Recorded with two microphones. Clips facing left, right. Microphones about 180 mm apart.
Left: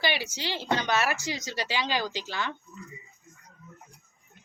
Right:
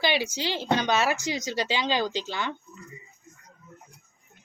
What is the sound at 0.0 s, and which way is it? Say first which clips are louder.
Speech: right 4 dB; 15° right (ahead or behind).